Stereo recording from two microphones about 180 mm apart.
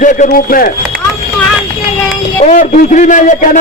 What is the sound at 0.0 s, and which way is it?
Speech, 45° left (ahead or behind).